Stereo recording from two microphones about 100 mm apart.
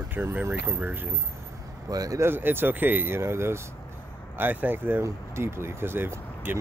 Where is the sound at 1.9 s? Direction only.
35° right (ahead or behind).